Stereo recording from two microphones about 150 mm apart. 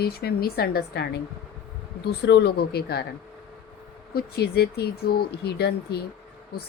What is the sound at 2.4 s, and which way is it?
Speech, 90° left.